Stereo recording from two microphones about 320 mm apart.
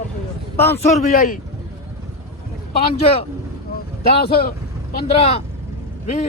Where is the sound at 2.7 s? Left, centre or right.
Centre.